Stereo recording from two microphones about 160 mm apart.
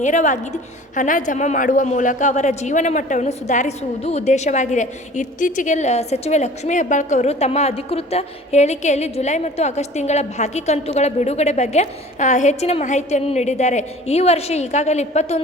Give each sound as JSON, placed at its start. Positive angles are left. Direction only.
{"t": 0.0, "sound": "a woman's voice", "side_deg": 50}